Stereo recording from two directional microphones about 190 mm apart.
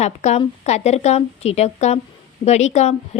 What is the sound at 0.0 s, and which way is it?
A woman's voice, 35° left (ahead or behind).